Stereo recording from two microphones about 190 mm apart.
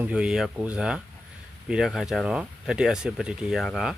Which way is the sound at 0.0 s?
5° right (ahead or behind).